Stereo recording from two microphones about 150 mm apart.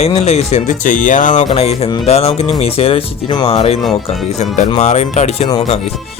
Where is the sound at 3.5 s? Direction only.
45° left (ahead or behind).